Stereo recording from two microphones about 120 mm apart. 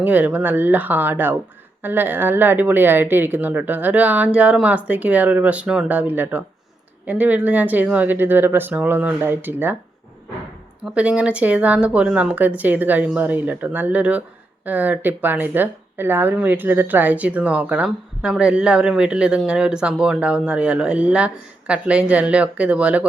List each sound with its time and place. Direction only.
0.0 s speech: 15° right (ahead or behind)
10.8 s speech: 10° right (ahead or behind)